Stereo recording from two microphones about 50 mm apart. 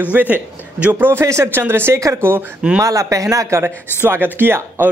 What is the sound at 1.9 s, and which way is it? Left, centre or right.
Speech, right.